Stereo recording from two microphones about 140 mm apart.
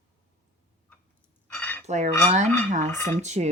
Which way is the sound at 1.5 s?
10° left (ahead or behind).